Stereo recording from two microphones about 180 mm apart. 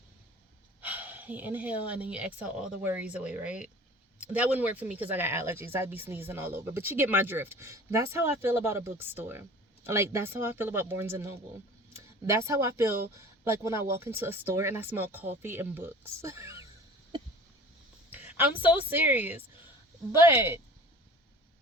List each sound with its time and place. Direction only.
0.8 s speech: 10° right (ahead or behind)
18.6 s speech: 10° right (ahead or behind)